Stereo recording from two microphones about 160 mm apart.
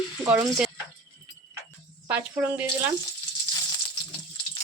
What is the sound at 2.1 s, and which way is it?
Speech, 10° right (ahead or behind).